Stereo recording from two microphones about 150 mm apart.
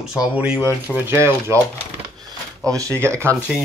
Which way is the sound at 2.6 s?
20° right (ahead or behind).